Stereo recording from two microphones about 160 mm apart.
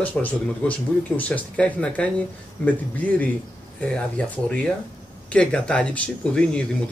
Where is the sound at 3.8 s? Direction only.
5° left (ahead or behind).